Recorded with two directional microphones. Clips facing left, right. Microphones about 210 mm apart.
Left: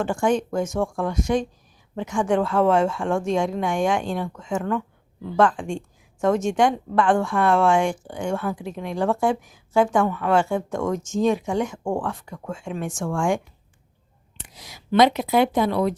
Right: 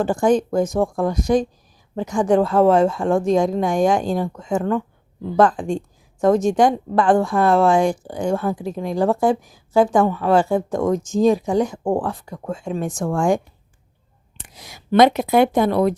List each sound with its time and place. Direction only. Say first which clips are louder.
0.0 s a woman's voice: right 4 dB; 35° right (ahead or behind)
14.3 s speech: right 2 dB; 50° right (ahead or behind)